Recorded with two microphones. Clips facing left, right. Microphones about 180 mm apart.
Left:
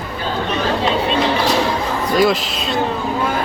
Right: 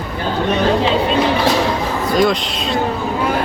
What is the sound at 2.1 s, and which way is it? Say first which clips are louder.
Speech: even; centre (ahead or behind).